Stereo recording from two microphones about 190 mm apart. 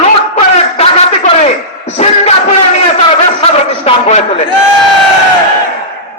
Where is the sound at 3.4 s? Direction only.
35° left (ahead or behind).